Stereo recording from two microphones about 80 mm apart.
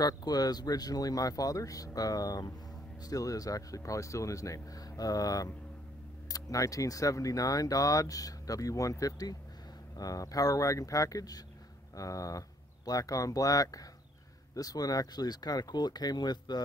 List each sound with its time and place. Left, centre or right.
0.0 s speech: left